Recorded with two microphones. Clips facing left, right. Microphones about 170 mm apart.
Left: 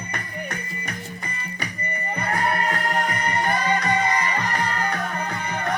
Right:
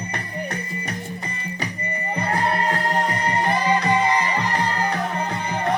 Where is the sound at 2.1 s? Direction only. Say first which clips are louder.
Right 2 dB; 30° right (ahead or behind).